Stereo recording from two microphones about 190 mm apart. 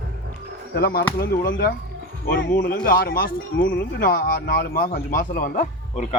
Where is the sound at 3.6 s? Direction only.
75° left (ahead or behind).